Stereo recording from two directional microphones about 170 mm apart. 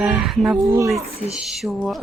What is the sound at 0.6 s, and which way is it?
Speech, 15° right (ahead or behind).